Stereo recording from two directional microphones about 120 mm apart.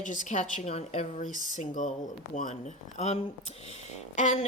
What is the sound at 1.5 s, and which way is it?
A woman's voice, 90° left.